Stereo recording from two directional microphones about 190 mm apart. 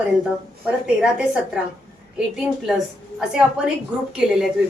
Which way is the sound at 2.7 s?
Centre (ahead or behind).